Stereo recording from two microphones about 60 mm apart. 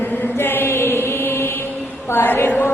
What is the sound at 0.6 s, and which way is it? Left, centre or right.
Chant, left.